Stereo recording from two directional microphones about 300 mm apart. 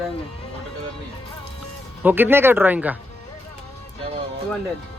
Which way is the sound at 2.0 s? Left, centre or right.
Centre.